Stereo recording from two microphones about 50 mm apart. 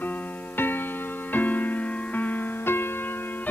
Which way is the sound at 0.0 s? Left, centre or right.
Left.